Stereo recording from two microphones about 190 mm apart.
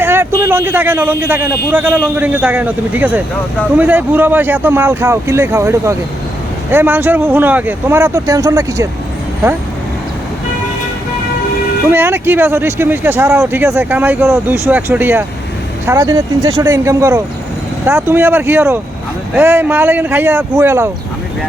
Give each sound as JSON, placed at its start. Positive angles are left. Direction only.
{"t": 0.0, "sound": "speech", "side_deg": -10}
{"t": 11.9, "sound": "speech", "side_deg": -10}